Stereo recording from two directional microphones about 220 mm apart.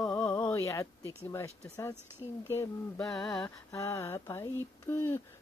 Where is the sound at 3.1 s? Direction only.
5° left (ahead or behind).